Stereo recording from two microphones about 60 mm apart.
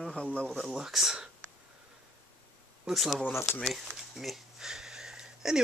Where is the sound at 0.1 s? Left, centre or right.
Left.